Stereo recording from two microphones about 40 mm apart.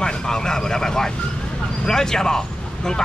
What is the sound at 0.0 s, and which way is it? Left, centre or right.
Speech, centre.